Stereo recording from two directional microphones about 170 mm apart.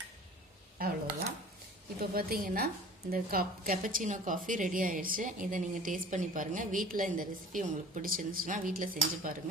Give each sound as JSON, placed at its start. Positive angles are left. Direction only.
{"t": 0.8, "sound": "a woman's voice", "side_deg": -60}
{"t": 2.0, "sound": "a woman's voice", "side_deg": -60}